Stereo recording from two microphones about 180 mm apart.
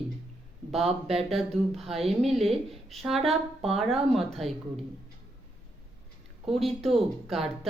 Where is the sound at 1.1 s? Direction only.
Centre (ahead or behind).